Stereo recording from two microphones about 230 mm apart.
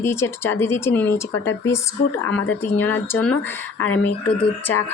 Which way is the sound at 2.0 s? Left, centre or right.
Left.